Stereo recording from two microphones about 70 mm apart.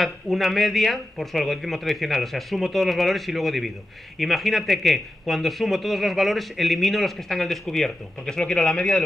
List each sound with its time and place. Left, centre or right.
0.0 s speech: centre